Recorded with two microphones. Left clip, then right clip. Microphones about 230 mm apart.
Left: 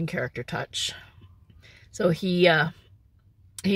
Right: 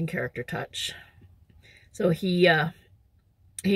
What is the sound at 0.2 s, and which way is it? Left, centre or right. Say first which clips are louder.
Speech: left 1 dB; left.